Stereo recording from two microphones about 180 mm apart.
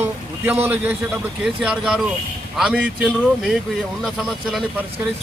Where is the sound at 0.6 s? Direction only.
10° right (ahead or behind).